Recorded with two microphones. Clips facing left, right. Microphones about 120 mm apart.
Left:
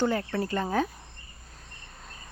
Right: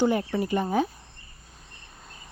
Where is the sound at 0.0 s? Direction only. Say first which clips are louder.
Right 3 dB; 15° right (ahead or behind).